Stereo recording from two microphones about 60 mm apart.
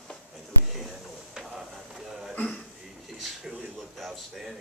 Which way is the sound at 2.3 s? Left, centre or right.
Left.